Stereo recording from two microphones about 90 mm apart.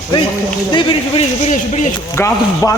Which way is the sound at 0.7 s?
70° left (ahead or behind).